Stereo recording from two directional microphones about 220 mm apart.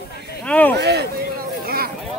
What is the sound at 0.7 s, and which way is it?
Speech, 50° right (ahead or behind).